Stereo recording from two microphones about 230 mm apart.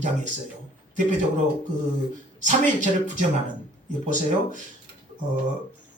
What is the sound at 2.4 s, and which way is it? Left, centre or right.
A man's voice, right.